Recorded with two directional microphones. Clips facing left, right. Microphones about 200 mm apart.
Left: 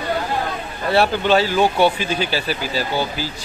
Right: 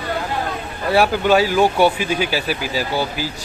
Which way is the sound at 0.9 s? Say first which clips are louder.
Right 1 dB; 10° right (ahead or behind).